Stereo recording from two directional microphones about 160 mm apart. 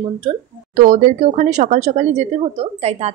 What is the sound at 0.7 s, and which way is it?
A woman's voice, 50° right (ahead or behind).